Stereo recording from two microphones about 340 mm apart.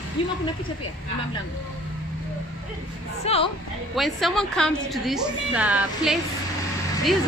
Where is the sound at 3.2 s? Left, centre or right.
Centre.